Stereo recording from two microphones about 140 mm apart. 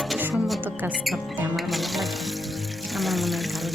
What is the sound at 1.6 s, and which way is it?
Speech, centre (ahead or behind).